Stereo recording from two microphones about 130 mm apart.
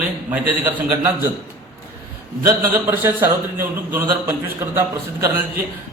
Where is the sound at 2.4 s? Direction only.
15° right (ahead or behind).